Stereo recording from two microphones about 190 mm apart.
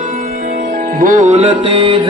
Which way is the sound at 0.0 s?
45° right (ahead or behind).